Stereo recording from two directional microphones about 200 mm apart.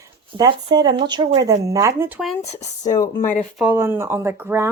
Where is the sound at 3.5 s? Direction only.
10° right (ahead or behind).